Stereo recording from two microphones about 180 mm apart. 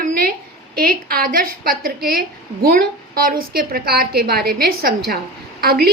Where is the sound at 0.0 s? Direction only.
55° right (ahead or behind).